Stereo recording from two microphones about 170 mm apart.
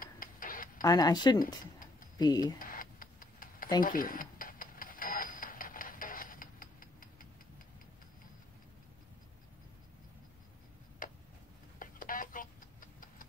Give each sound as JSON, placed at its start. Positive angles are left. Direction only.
{"t": 0.0, "sound": "tick-tock", "side_deg": 55}
{"t": 0.8, "sound": "speech", "side_deg": 20}
{"t": 1.4, "sound": "a sound", "side_deg": 55}
{"t": 2.1, "sound": "speech", "side_deg": 25}
{"t": 2.6, "sound": "tick-tock", "side_deg": 55}
{"t": 3.8, "sound": "a sound", "side_deg": 55}
{"t": 11.0, "sound": "tick-tock", "side_deg": 55}
{"t": 11.8, "sound": "clock", "side_deg": 55}